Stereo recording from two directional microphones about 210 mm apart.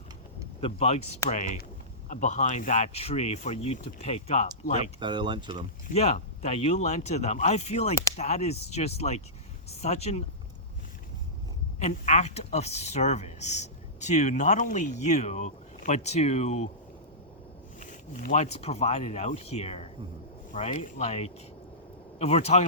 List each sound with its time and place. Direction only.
0.6 s speech: 30° left (ahead or behind)
4.9 s speech: 20° right (ahead or behind)
5.9 s speech: 30° left (ahead or behind)
11.8 s speech: 35° left (ahead or behind)
17.7 s speech: 35° left (ahead or behind)